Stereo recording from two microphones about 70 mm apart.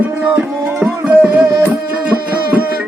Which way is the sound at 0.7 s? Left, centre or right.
Right.